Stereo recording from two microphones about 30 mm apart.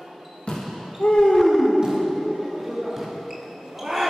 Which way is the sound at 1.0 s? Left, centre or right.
Left.